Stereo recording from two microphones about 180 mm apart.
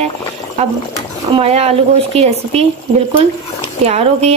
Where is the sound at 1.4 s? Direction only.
35° right (ahead or behind).